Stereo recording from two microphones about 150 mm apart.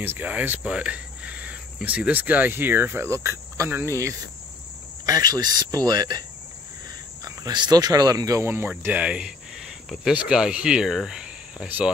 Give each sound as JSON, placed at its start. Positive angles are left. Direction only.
{"t": 0.0, "sound": "cricket", "side_deg": -10}
{"t": 5.0, "sound": "speech", "side_deg": -25}
{"t": 7.2, "sound": "speech", "side_deg": -25}